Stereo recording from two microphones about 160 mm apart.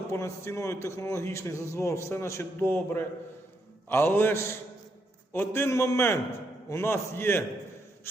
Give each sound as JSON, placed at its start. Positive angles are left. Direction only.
{"t": 0.1, "sound": "a man's voice", "side_deg": 15}